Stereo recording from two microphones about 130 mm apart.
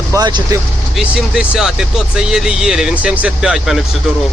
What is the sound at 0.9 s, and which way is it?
Speech, 5° right (ahead or behind).